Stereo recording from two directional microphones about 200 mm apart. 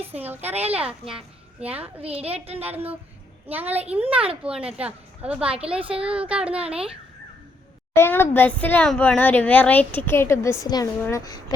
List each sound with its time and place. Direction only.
0.2 s a woman's voice: 10° right (ahead or behind)
2.0 s a woman's voice: 30° right (ahead or behind)
2.6 s a child's voice: 10° right (ahead or behind)
7.9 s speech: 10° left (ahead or behind)